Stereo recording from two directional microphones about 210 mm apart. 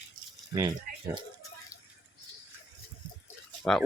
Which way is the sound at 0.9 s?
40° right (ahead or behind).